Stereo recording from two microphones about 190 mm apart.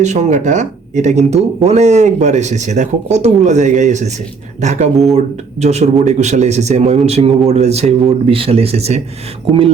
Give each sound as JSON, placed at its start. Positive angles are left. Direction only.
{"t": 0.0, "sound": "speech", "side_deg": -40}